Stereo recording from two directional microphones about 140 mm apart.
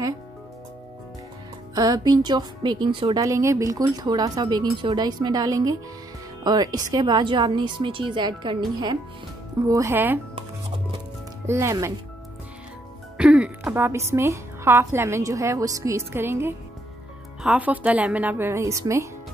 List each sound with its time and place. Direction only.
1.8 s a woman's voice: 30° right (ahead or behind)
11.4 s speech: 20° right (ahead or behind)
13.2 s music: 5° right (ahead or behind)
13.7 s a woman's voice: 20° right (ahead or behind)